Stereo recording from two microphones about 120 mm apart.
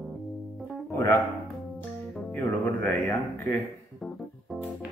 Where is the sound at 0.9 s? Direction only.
25° left (ahead or behind).